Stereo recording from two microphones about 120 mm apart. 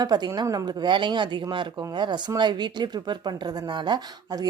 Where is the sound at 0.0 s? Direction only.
35° right (ahead or behind).